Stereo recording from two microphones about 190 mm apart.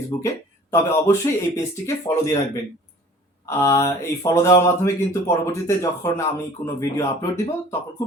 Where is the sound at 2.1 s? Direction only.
15° left (ahead or behind).